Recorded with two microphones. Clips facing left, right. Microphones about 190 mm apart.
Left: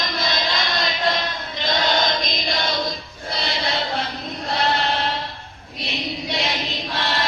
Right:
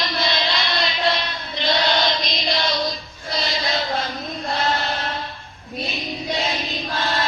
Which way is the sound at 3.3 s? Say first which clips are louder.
Right 1 dB; 60° left (ahead or behind).